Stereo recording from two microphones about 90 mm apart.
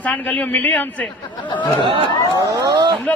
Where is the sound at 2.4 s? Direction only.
40° right (ahead or behind).